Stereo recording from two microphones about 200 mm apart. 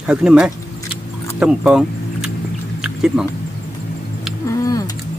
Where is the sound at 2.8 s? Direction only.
5° right (ahead or behind).